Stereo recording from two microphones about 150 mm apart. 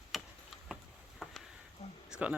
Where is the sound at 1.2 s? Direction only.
Centre (ahead or behind).